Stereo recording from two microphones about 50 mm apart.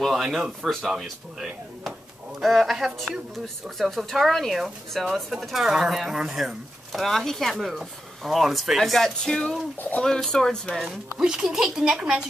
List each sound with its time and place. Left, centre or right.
0.2 s speech: centre
2.4 s speech: centre
9.8 s speech: left
10.0 s speech: centre
11.1 s speech: centre
12.0 s a woman's voice: centre